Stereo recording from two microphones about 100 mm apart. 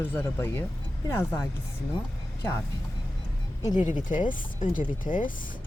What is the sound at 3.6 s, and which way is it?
Speech, 45° left (ahead or behind).